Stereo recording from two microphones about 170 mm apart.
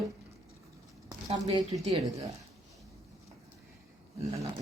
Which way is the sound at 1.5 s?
25° right (ahead or behind).